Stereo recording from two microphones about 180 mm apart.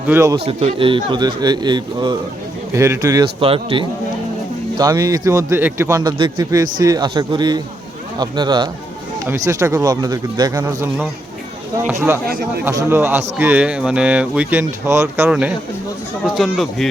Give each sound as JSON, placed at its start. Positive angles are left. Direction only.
{"t": 0.1, "sound": "speech", "side_deg": -15}
{"t": 0.4, "sound": "a man's voice", "side_deg": -35}
{"t": 3.4, "sound": "a man's voice", "side_deg": -30}
{"t": 4.8, "sound": "a man's voice", "side_deg": -20}
{"t": 11.9, "sound": "speech", "side_deg": -15}